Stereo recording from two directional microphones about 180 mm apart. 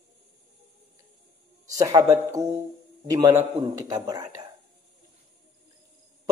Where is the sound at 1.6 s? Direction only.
20° right (ahead or behind).